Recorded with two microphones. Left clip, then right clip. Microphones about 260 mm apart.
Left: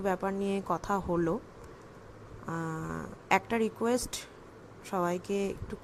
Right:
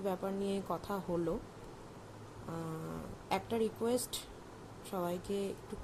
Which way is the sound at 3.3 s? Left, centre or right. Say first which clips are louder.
Left 7 dB; left.